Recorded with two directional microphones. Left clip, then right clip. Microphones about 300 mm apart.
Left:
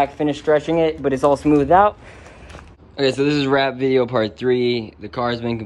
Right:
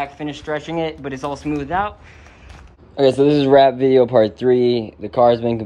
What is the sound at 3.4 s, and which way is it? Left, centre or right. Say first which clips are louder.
Speech: right 6 dB; left.